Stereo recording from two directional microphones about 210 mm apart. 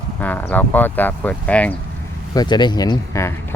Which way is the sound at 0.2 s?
10° left (ahead or behind).